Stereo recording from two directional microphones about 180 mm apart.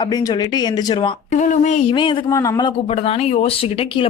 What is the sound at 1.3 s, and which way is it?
Speech, 40° left (ahead or behind).